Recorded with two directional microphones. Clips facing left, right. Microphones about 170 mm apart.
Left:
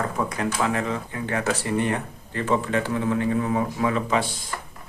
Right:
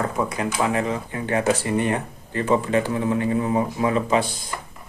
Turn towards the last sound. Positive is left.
turn(degrees=-20)  # may be behind; listen again after turning